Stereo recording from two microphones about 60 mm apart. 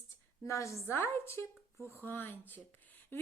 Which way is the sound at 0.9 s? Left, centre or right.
Left.